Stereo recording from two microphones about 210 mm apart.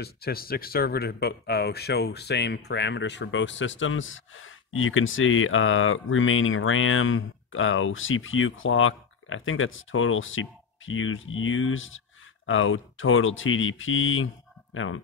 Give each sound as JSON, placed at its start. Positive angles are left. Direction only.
{"t": 0.0, "sound": "speech", "side_deg": 45}